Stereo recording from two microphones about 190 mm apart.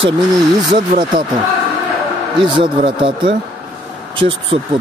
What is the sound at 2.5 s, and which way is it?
Speech, 25° right (ahead or behind).